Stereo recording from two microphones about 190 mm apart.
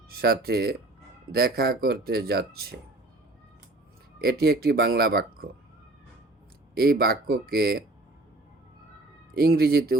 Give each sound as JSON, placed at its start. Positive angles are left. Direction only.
{"t": 0.1, "sound": "speech", "side_deg": -55}
{"t": 4.2, "sound": "speech", "side_deg": -55}
{"t": 7.0, "sound": "speech", "side_deg": -55}
{"t": 9.3, "sound": "speech", "side_deg": -55}